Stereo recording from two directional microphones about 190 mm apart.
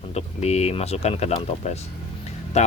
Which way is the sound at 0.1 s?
35° left (ahead or behind).